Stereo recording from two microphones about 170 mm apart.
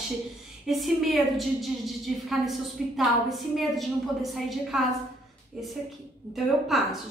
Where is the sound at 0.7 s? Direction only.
Centre (ahead or behind).